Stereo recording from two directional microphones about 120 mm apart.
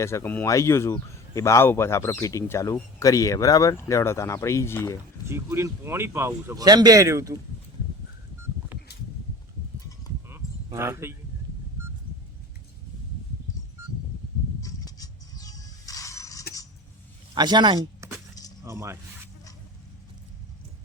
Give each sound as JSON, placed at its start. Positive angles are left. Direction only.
{"t": 0.0, "sound": "speech", "side_deg": 20}
{"t": 5.2, "sound": "a man's voice", "side_deg": -20}
{"t": 10.2, "sound": "a sound", "side_deg": -20}
{"t": 13.8, "sound": "a sound", "side_deg": -20}
{"t": 14.6, "sound": "music", "side_deg": 30}
{"t": 17.3, "sound": "speech", "side_deg": -35}
{"t": 18.0, "sound": "keys jangling", "side_deg": -25}
{"t": 18.6, "sound": "speech", "side_deg": -25}